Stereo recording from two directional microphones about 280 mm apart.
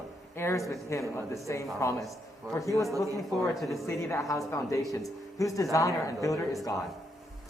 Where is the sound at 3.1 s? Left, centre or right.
Centre.